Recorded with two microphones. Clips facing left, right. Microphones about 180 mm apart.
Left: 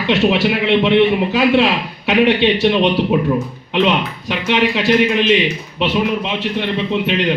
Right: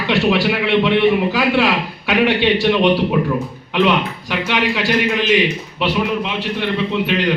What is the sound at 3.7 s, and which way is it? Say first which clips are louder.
A man's voice: even; 20° left (ahead or behind).